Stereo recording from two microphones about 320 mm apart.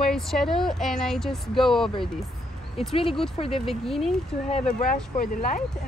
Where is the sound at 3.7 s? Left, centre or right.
Centre.